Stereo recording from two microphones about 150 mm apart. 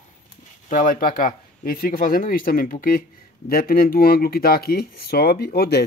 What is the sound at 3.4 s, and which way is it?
Speech, 85° left.